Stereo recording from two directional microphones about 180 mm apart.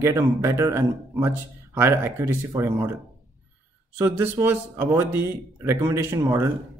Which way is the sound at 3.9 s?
10° right (ahead or behind).